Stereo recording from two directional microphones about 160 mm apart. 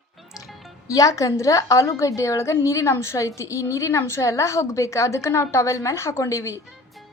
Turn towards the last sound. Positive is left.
turn(degrees=20)  # may be behind; listen again after turning